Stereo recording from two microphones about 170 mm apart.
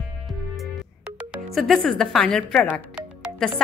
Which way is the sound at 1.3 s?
Centre (ahead or behind).